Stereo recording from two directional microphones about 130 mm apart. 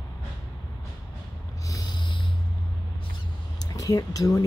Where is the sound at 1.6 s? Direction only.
30° left (ahead or behind).